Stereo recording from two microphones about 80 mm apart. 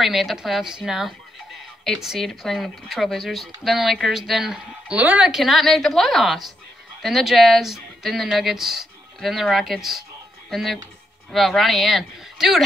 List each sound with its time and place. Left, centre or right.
0.0 s speech: centre
4.9 s speech: centre
5.3 s speech: centre